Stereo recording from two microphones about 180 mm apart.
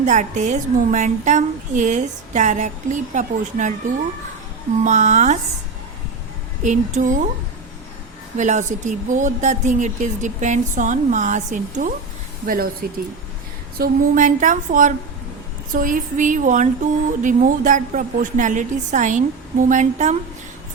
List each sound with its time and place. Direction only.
0.0 s a woman's voice: 40° right (ahead or behind)
4.8 s a sound: 40° right (ahead or behind)
6.6 s a woman's voice: 40° right (ahead or behind)
8.4 s a woman's voice: 40° right (ahead or behind)